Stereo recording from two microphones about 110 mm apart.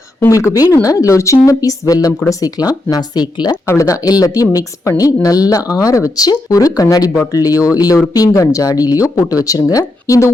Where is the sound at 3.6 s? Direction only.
25° left (ahead or behind).